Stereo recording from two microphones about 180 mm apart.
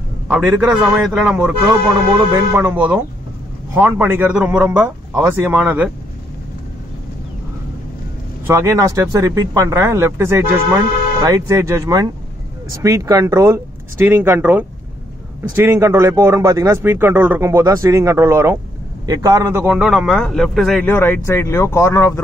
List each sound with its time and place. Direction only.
0.3 s a man's voice: 5° right (ahead or behind)
8.5 s speech: 15° right (ahead or behind)
19.7 s a man's voice: centre (ahead or behind)
20.9 s speech: 10° left (ahead or behind)